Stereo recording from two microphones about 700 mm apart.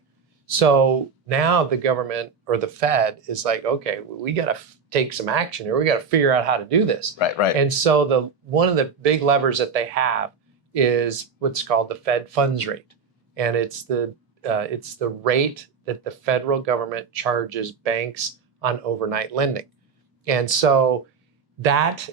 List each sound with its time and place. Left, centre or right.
0.5 s speech: right
4.2 s speech: right
7.2 s speech: left
7.6 s speech: right